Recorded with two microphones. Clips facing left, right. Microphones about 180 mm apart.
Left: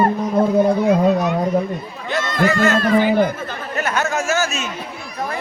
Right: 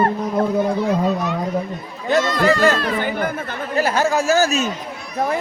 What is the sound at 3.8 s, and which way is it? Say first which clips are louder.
Speech: right 3 dB; 30° right (ahead or behind).